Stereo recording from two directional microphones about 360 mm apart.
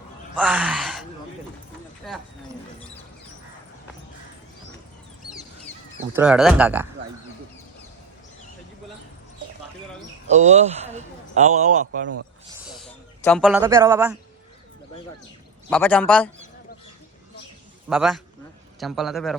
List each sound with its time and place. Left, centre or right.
0.3 s speech: centre
2.0 s clip-clop: centre
6.1 s speech: centre
10.2 s a man's voice: centre
12.6 s a sound: centre
15.7 s speech: centre
17.8 s speech: centre